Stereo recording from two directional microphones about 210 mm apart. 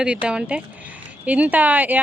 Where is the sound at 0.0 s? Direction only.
5° right (ahead or behind).